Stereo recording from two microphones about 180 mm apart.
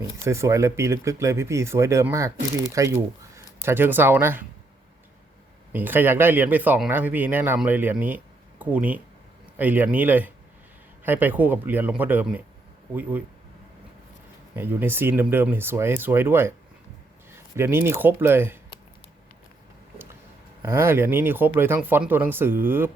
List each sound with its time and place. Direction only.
0.0 s speech: 15° right (ahead or behind)
5.7 s speech: 10° right (ahead or behind)
14.5 s speech: 10° right (ahead or behind)
20.7 s speech: 15° right (ahead or behind)